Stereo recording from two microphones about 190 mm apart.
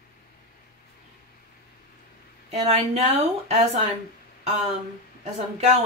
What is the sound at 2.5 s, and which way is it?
Speech, 35° right (ahead or behind).